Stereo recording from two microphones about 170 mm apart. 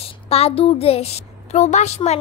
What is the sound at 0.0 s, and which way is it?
A child's voice, 35° left (ahead or behind).